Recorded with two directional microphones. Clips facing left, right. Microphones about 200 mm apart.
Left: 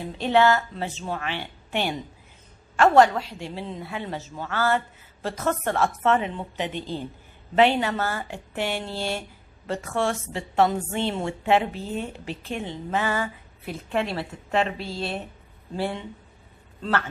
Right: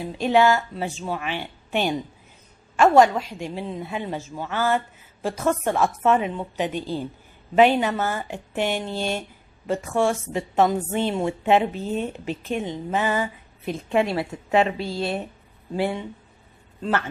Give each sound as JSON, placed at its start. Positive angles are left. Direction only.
{"t": 0.2, "sound": "a woman's voice", "side_deg": -15}
{"t": 14.1, "sound": "a woman's voice", "side_deg": -5}